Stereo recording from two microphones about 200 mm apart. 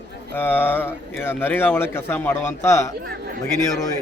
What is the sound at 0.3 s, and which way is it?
Speech, 10° left (ahead or behind).